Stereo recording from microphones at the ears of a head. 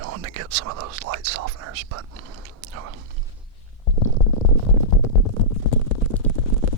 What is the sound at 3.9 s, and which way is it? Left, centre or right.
Stomach rumble, left.